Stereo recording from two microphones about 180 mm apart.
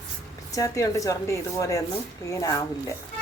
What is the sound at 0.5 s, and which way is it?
Speech, 20° left (ahead or behind).